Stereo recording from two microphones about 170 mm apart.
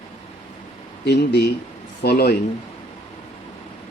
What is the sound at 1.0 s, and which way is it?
Speech, 70° left (ahead or behind).